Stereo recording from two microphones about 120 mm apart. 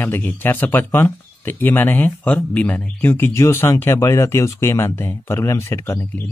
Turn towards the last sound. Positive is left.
turn(degrees=15)  # may be behind; listen again after turning